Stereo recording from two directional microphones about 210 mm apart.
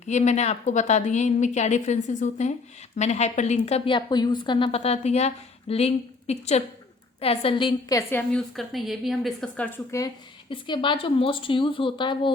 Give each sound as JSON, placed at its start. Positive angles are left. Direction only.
{"t": 0.1, "sound": "a woman's voice", "side_deg": 35}
{"t": 8.3, "sound": "a woman's voice", "side_deg": 0}
{"t": 10.5, "sound": "a woman's voice", "side_deg": 25}